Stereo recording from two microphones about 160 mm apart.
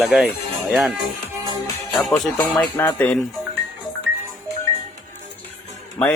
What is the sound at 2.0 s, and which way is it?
Speech, centre (ahead or behind).